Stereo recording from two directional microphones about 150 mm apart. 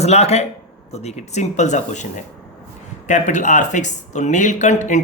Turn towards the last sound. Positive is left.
turn(degrees=55)  # may be behind; listen again after turning